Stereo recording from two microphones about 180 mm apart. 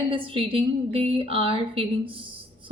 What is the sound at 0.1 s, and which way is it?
A woman's voice, 30° right (ahead or behind).